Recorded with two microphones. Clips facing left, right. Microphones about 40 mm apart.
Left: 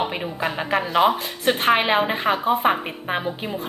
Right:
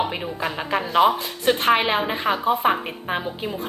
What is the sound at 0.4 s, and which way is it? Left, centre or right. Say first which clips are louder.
A woman's voice: left 2 dB; centre.